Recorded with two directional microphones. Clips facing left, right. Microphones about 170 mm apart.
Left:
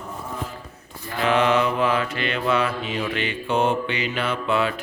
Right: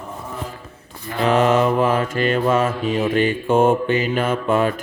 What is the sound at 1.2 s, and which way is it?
Mantra, 40° right (ahead or behind).